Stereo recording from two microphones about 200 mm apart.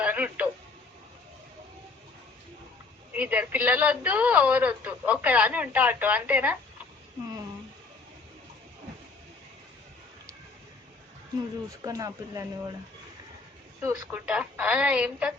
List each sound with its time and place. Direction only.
0.0 s radio: 5° right (ahead or behind)
3.1 s speech: 5° right (ahead or behind)
11.8 s speech: 15° right (ahead or behind)
13.8 s speech: 5° right (ahead or behind)